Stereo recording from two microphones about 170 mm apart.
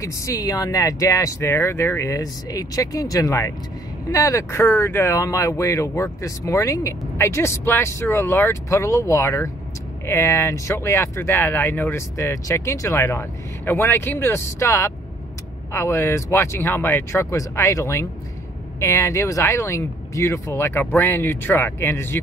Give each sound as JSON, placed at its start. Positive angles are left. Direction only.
{"t": 0.0, "sound": "speech", "side_deg": 20}